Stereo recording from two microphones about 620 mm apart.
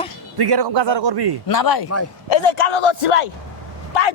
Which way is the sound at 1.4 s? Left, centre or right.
Left.